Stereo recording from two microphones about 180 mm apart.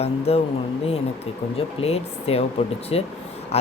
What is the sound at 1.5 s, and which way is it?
Speech, 35° left (ahead or behind).